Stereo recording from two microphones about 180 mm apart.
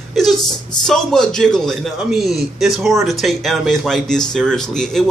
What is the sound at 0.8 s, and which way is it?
A man's voice, 5° left (ahead or behind).